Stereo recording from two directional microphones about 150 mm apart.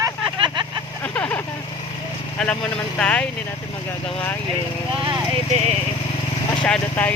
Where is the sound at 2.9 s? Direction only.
5° left (ahead or behind).